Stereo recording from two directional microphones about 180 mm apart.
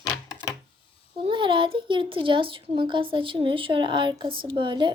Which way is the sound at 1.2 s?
30° right (ahead or behind).